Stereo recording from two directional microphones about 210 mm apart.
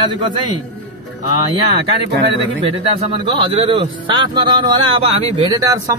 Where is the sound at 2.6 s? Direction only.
25° right (ahead or behind).